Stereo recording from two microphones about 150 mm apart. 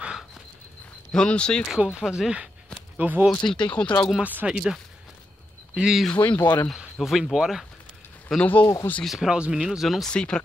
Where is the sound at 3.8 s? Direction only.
10° left (ahead or behind).